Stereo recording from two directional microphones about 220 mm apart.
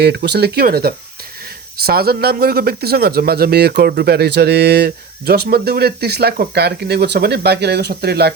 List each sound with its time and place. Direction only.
0.0 s speech: 50° right (ahead or behind)